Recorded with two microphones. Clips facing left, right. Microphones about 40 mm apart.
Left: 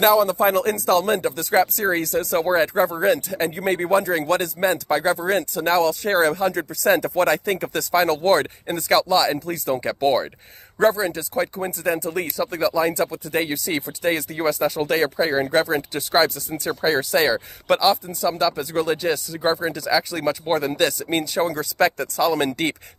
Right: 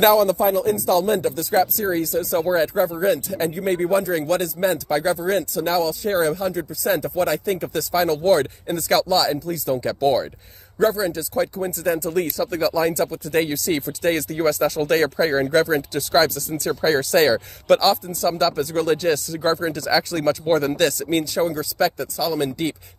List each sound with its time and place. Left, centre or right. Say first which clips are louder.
0.4 s speech: even; left
0.8 s speech: even; left; by 12.9 s centre
12.9 s speech: right 2 dB; left; by 15.4 s centre
15.5 s speech: right 2 dB; left
21.5 s speech: left 1 dB; left